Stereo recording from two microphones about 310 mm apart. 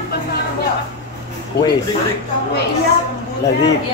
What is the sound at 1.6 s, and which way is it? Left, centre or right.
Speech, left.